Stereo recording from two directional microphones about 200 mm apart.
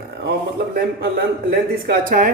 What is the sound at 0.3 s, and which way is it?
A man's voice, 50° right (ahead or behind).